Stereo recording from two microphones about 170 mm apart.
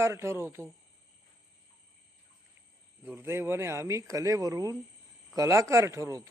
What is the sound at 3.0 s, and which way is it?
A woman's voice, 15° right (ahead or behind).